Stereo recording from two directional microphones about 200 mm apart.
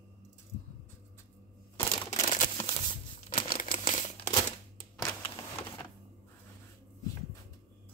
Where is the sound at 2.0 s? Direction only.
40° left (ahead or behind).